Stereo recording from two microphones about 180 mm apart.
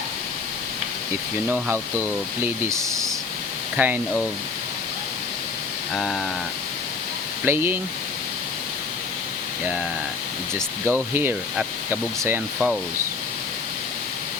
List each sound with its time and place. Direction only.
1.5 s speech: 10° right (ahead or behind)
5.9 s a sound: centre (ahead or behind)
7.4 s speech: 10° right (ahead or behind)
10.8 s speech: 15° right (ahead or behind)